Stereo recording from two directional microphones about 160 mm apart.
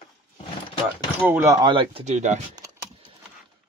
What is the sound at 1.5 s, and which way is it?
Speech, 30° right (ahead or behind).